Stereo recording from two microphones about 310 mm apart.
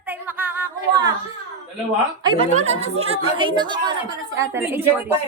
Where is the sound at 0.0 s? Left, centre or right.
Centre.